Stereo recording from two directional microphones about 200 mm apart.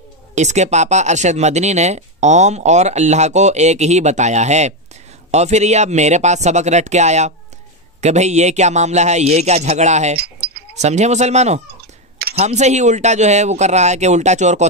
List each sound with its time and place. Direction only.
0.3 s speech: 35° right (ahead or behind)
10.1 s a sound: 55° right (ahead or behind)
10.8 s speech: 35° right (ahead or behind)